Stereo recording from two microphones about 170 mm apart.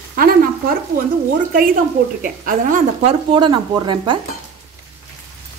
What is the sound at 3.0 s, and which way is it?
Speech, 30° right (ahead or behind).